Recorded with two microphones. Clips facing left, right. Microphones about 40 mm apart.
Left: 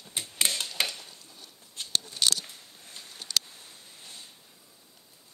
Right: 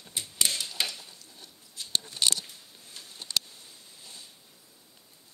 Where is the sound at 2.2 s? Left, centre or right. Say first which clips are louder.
Left 1 dB; right.